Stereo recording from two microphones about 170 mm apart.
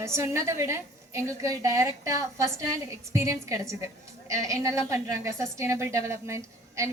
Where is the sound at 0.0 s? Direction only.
15° right (ahead or behind).